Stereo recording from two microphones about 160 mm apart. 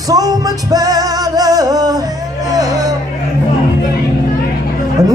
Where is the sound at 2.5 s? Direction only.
20° right (ahead or behind).